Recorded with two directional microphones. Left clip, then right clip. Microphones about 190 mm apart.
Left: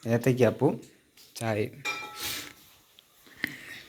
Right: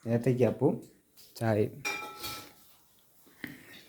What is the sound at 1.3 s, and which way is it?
Speech, 25° right (ahead or behind).